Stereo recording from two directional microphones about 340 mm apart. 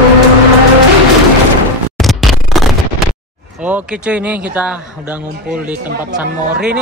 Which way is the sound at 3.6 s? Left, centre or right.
Centre.